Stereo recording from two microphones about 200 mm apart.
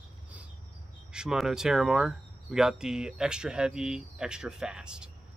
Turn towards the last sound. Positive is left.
turn(degrees=-5)  # may be behind; listen again after turning